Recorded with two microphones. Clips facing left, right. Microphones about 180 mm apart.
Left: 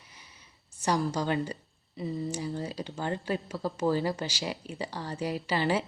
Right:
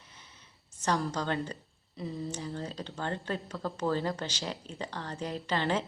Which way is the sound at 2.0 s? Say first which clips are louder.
Left 4 dB; 10° left (ahead or behind).